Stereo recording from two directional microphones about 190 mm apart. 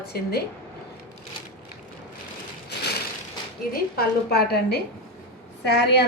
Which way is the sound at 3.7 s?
55° left (ahead or behind).